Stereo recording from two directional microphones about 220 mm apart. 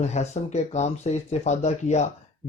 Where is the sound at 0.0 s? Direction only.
30° left (ahead or behind).